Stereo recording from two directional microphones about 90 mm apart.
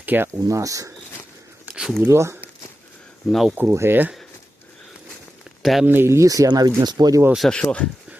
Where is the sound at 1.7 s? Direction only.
5° right (ahead or behind).